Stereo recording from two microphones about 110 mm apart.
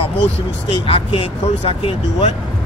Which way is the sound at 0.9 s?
60° left (ahead or behind).